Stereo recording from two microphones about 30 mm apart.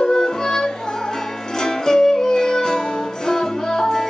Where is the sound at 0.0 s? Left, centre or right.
Centre.